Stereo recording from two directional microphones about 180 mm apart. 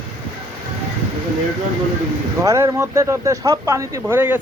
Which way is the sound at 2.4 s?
15° right (ahead or behind).